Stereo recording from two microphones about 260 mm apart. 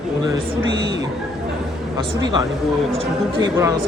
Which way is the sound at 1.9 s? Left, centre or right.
Centre.